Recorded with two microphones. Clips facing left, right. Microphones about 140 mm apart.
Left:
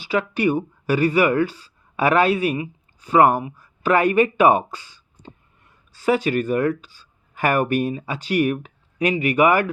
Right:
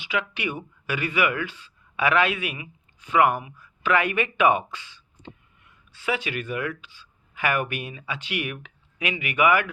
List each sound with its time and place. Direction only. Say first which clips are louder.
0.0 s speech: left 8 dB; 40° left (ahead or behind)